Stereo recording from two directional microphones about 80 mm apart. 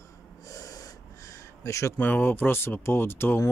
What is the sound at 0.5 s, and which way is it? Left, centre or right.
Gasp, left.